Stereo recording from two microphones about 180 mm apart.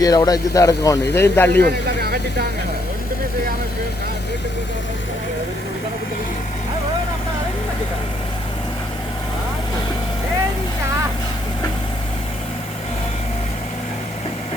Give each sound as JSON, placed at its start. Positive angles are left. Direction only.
{"t": 0.0, "sound": "a man's voice", "side_deg": 20}
{"t": 1.6, "sound": "speech", "side_deg": -60}